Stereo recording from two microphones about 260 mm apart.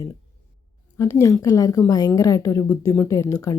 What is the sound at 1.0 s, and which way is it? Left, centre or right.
A woman's voice, centre.